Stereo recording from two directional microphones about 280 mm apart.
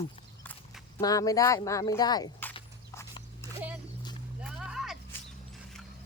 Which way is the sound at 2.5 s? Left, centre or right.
Centre.